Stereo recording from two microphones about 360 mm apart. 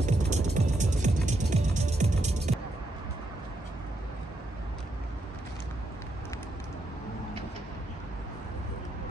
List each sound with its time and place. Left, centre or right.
0.0 s music: centre